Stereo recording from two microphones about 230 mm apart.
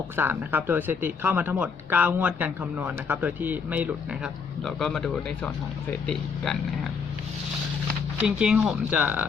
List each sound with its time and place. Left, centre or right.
0.2 s speech: centre
8.2 s speech: centre